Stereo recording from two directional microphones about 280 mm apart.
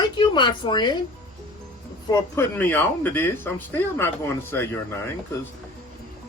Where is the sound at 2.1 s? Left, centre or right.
Centre.